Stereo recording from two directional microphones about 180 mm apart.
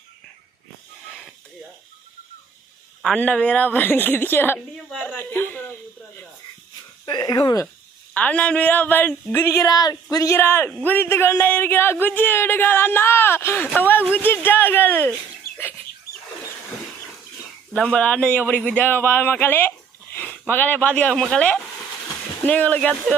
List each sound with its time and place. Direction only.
1.0 s snake: 5° left (ahead or behind)
3.0 s a woman's voice: 5° left (ahead or behind)
7.0 s speech: 25° left (ahead or behind)
8.1 s speech: 10° left (ahead or behind)
17.7 s speech: 5° left (ahead or behind)